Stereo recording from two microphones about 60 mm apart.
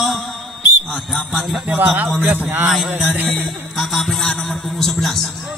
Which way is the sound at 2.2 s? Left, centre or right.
Right.